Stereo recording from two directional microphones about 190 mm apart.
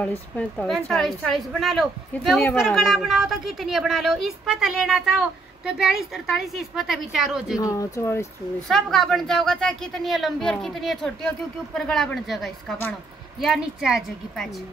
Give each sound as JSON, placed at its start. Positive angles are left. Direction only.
{"t": 0.0, "sound": "a woman's voice", "side_deg": 10}
{"t": 7.5, "sound": "speech", "side_deg": 20}
{"t": 8.6, "sound": "a woman's voice", "side_deg": 0}